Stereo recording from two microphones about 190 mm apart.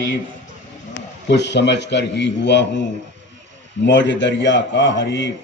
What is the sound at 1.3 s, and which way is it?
A man's voice, 65° left (ahead or behind).